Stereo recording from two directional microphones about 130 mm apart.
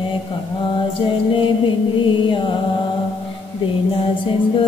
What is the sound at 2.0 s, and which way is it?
Mantra, 40° left (ahead or behind).